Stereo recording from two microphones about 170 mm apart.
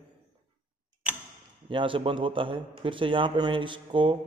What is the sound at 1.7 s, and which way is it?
A man's voice, 30° right (ahead or behind).